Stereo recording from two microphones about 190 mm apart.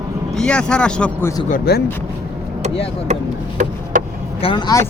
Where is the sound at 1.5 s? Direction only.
50° left (ahead or behind).